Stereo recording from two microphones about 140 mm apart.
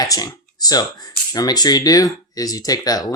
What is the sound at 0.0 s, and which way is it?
Speech, 30° left (ahead or behind).